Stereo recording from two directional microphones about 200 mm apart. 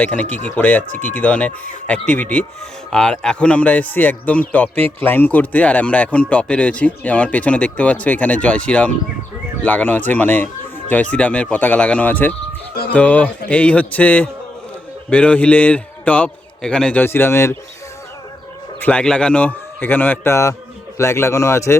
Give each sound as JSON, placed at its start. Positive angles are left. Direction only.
{"t": 0.0, "sound": "speech", "side_deg": 5}
{"t": 0.9, "sound": "speech", "side_deg": -35}
{"t": 1.1, "sound": "speech", "side_deg": 5}
{"t": 18.8, "sound": "speech", "side_deg": 5}